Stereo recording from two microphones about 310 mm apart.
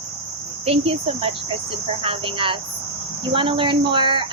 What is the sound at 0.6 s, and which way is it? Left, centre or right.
Speech, centre.